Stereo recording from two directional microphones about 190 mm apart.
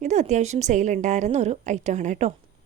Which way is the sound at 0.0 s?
35° right (ahead or behind).